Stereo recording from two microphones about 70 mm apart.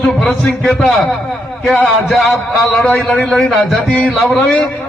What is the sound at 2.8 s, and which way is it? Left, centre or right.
Speech, left.